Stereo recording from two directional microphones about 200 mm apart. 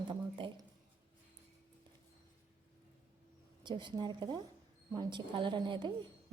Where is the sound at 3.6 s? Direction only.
25° right (ahead or behind).